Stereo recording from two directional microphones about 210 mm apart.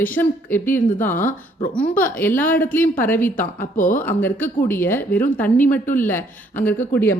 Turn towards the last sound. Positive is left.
turn(degrees=10)  # may be behind; listen again after turning